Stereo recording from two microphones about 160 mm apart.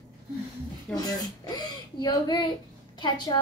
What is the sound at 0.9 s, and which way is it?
A woman's voice, 25° left (ahead or behind).